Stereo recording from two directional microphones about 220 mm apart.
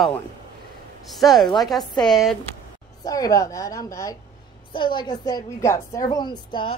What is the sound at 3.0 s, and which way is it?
A woman's voice, 15° left (ahead or behind).